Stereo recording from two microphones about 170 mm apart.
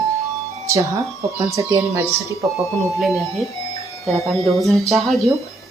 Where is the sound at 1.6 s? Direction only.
20° right (ahead or behind).